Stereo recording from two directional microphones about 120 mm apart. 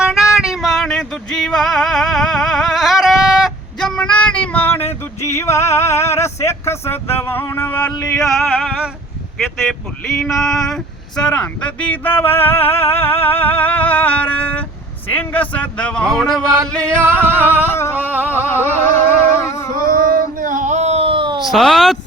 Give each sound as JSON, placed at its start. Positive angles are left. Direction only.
{"t": 0.0, "sound": "music", "side_deg": -5}
{"t": 8.1, "sound": "music", "side_deg": 5}
{"t": 10.2, "sound": "speech", "side_deg": 5}
{"t": 17.0, "sound": "singing", "side_deg": -20}
{"t": 17.4, "sound": "a sound", "side_deg": 20}
{"t": 18.3, "sound": "music", "side_deg": 20}
{"t": 20.4, "sound": "a sound", "side_deg": -90}
{"t": 21.4, "sound": "music", "side_deg": 0}